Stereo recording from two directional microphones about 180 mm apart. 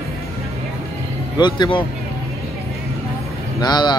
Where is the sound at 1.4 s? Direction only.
25° left (ahead or behind).